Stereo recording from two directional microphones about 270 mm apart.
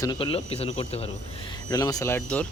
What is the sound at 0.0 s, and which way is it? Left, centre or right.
Speech, centre.